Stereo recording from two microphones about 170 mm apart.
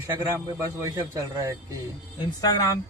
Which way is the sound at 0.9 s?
20° right (ahead or behind).